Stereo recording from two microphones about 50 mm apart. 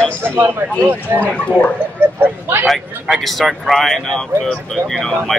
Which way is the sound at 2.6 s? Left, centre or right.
Centre.